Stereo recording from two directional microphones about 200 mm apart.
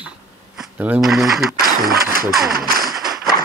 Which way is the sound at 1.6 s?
45° right (ahead or behind).